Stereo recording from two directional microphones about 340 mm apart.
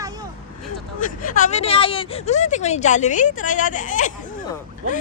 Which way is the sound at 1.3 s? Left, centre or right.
Left.